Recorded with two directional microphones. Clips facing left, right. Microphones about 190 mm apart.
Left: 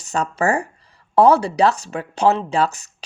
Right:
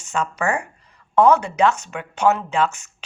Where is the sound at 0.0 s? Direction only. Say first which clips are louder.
Left 3 dB; 35° left (ahead or behind).